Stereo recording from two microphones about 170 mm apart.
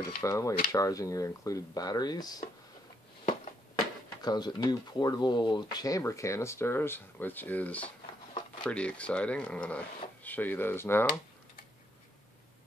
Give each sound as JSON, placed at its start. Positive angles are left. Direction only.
{"t": 0.2, "sound": "speech", "side_deg": 20}
{"t": 4.2, "sound": "speech", "side_deg": 25}